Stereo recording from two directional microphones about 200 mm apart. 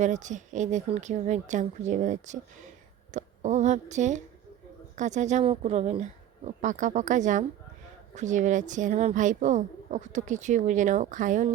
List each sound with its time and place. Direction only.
0.0 s a woman's voice: 35° right (ahead or behind)